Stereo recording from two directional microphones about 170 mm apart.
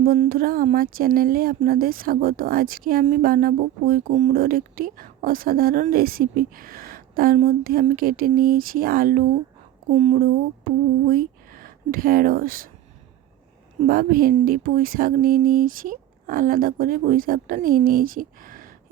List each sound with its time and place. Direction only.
0.0 s speech: 55° right (ahead or behind)
9.9 s speech: 40° right (ahead or behind)
10.2 s speech: 60° right (ahead or behind)
13.8 s speech: 55° right (ahead or behind)